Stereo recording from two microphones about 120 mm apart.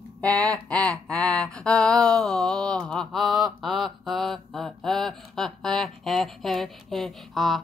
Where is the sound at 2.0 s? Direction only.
5° left (ahead or behind).